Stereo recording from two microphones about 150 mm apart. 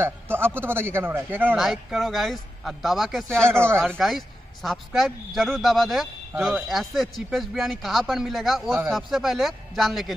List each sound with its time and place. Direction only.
0.0 s speech: 15° right (ahead or behind)
1.6 s speech: centre (ahead or behind)
3.4 s speech: 15° right (ahead or behind)
4.0 s speech: centre (ahead or behind)